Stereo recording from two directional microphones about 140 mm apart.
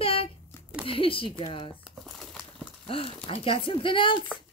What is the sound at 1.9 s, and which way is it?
Crumpling, centre (ahead or behind).